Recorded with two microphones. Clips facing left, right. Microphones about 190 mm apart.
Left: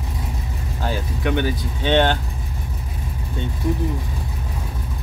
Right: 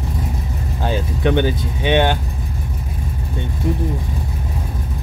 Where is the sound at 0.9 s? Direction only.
25° right (ahead or behind).